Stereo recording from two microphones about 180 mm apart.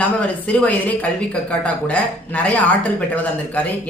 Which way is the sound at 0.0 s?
5° left (ahead or behind).